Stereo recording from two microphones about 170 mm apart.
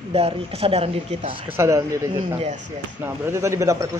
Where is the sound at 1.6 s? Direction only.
15° right (ahead or behind).